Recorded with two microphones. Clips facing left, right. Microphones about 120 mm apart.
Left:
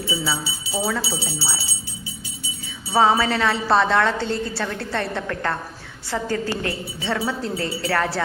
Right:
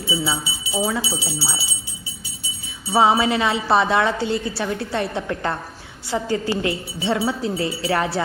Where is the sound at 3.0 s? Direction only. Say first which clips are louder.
Right 1 dB; 15° right (ahead or behind).